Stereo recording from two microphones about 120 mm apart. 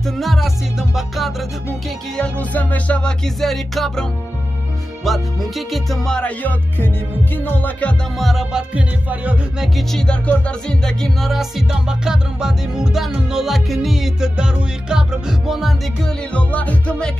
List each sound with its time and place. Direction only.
0.0 s music: centre (ahead or behind)
2.1 s music: 10° left (ahead or behind)
8.2 s music: centre (ahead or behind)
9.8 s music: 5° left (ahead or behind)